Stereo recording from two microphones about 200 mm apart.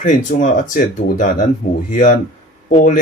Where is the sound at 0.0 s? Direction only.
40° left (ahead or behind).